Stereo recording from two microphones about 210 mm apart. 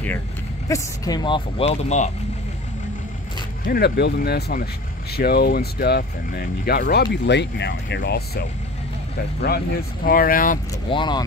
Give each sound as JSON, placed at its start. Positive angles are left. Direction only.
{"t": 0.7, "sound": "speech", "side_deg": 15}
{"t": 3.6, "sound": "speech", "side_deg": 45}
{"t": 10.0, "sound": "speech", "side_deg": 45}
{"t": 10.9, "sound": "speech", "side_deg": 20}